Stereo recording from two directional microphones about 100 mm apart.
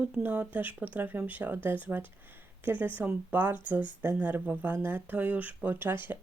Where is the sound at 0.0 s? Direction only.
15° right (ahead or behind).